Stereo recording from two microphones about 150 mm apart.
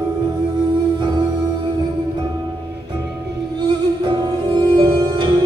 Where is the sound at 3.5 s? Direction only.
30° right (ahead or behind).